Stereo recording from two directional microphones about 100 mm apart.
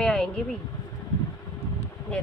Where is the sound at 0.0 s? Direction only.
10° left (ahead or behind).